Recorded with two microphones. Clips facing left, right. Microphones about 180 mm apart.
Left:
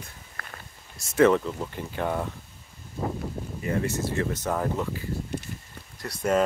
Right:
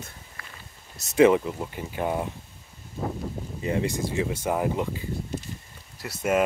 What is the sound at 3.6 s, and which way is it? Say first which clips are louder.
Speech: right 1 dB; 20° right (ahead or behind).